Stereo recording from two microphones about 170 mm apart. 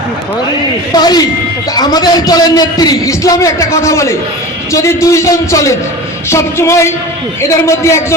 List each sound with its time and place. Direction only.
0.9 s a man's voice: 25° left (ahead or behind)